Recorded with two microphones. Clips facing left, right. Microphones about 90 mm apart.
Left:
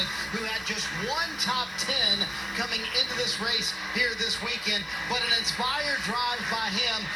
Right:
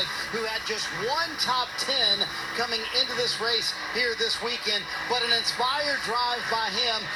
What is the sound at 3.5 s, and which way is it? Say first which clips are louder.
Speech: right 2 dB; 55° right (ahead or behind).